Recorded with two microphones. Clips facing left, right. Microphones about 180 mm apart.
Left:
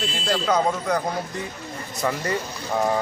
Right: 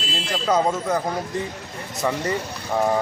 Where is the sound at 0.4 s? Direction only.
5° right (ahead or behind).